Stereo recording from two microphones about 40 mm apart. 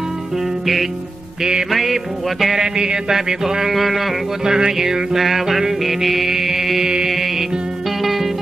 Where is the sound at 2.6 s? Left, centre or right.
Centre.